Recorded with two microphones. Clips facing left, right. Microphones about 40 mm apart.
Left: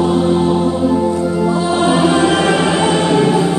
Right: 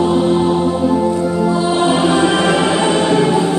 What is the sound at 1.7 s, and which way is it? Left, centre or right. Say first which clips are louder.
Music: left 2 dB; centre.